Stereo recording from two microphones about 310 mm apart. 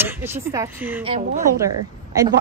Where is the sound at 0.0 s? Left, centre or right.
Centre.